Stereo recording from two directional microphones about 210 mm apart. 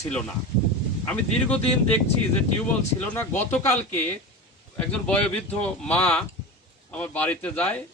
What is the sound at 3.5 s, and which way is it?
Speech, 10° left (ahead or behind).